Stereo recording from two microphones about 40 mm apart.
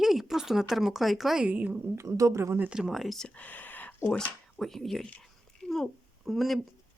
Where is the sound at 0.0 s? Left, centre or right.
Centre.